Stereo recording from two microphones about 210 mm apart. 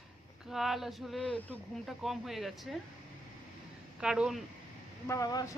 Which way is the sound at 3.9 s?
5° right (ahead or behind).